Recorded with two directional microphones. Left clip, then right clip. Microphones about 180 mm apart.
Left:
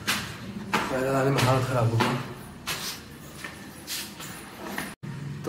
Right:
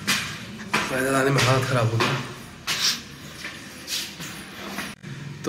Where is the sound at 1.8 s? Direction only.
Centre (ahead or behind).